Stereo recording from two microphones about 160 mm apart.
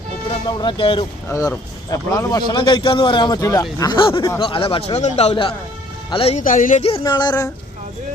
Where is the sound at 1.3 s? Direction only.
20° left (ahead or behind); by 6.4 s 35° left (ahead or behind).